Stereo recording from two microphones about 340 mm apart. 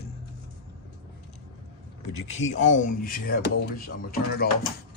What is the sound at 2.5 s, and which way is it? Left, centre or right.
Speech, left.